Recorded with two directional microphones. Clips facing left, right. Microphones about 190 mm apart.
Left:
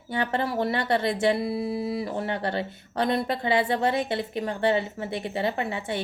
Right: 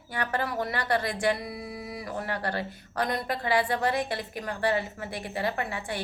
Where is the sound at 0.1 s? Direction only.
25° left (ahead or behind).